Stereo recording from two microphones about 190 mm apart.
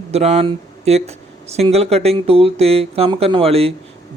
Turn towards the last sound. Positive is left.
turn(degrees=-30)  # may be behind; listen again after turning